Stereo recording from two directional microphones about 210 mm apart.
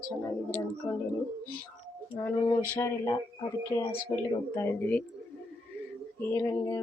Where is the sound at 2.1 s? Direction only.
15° left (ahead or behind).